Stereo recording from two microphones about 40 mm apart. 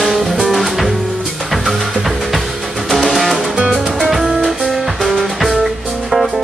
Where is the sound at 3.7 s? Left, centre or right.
Centre.